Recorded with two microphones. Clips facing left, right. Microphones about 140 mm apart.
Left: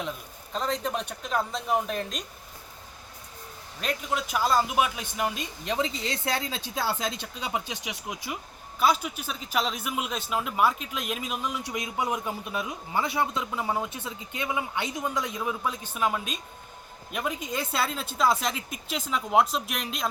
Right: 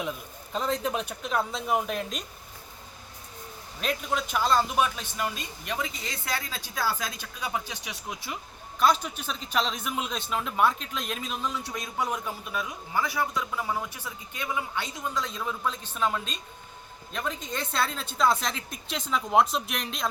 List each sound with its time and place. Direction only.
0.5 s speech: 5° right (ahead or behind)
3.8 s a man's voice: centre (ahead or behind)